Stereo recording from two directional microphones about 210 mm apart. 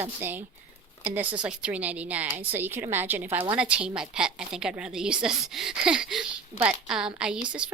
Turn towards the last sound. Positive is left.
turn(degrees=-5)  # may be behind; listen again after turning